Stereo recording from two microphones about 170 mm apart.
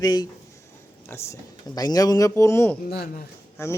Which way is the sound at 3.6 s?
15° left (ahead or behind).